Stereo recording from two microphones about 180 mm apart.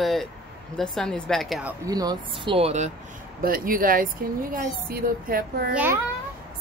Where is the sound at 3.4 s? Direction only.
50° right (ahead or behind).